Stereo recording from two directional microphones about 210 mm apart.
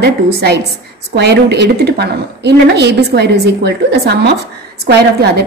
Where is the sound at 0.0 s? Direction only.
50° right (ahead or behind).